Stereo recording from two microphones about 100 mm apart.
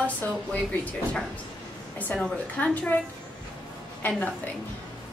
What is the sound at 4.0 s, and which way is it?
Speech, 15° left (ahead or behind).